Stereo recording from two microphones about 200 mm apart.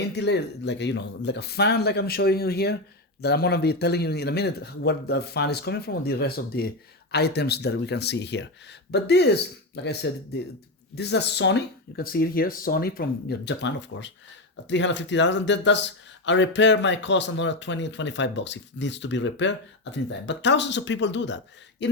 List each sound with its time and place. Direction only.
0.1 s speech: 60° left (ahead or behind)